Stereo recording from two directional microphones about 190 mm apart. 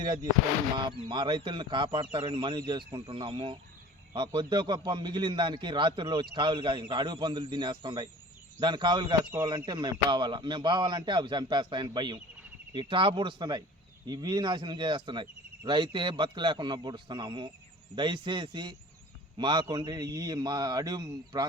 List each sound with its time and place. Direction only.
0.0 s a man's voice: 20° right (ahead or behind)